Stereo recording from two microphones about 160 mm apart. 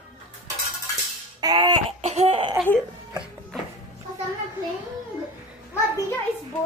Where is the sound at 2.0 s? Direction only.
40° right (ahead or behind).